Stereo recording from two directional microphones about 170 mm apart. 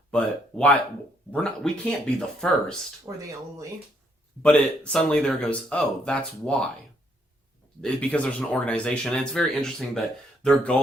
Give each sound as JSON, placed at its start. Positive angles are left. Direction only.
{"t": 0.1, "sound": "speech", "side_deg": 5}
{"t": 3.1, "sound": "speech", "side_deg": -15}
{"t": 4.4, "sound": "speech", "side_deg": 5}
{"t": 7.8, "sound": "speech", "side_deg": 5}